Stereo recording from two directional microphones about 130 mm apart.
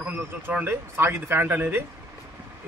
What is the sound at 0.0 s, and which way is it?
Speech, 10° right (ahead or behind).